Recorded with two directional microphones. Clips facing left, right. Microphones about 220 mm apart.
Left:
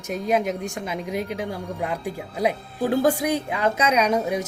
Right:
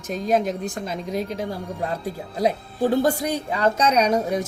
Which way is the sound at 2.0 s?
10° left (ahead or behind).